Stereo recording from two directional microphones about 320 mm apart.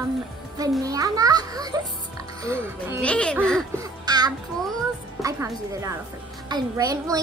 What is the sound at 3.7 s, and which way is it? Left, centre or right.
Music, centre.